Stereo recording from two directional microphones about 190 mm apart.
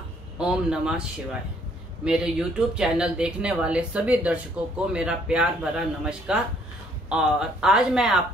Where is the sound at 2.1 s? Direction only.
5° right (ahead or behind).